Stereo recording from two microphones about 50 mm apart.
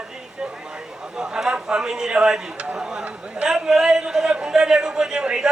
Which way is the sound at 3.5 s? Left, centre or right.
Centre.